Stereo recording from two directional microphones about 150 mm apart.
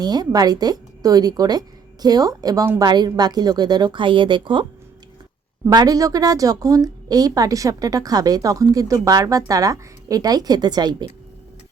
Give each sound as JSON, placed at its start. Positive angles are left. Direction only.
{"t": 0.0, "sound": "a woman's voice", "side_deg": -25}
{"t": 5.6, "sound": "a woman's voice", "side_deg": -25}